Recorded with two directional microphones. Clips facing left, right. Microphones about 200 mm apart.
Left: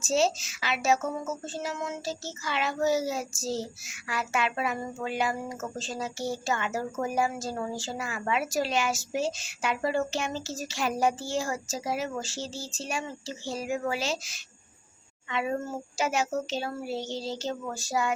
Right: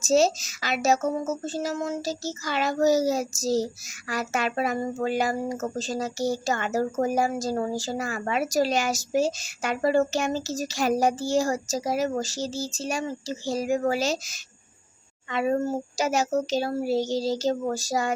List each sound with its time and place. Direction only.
0.0 s speech: 40° right (ahead or behind)